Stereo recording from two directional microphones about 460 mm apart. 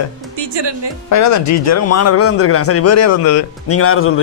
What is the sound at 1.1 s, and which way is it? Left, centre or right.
Speech, left.